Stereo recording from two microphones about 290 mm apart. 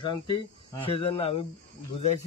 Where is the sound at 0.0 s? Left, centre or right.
Centre.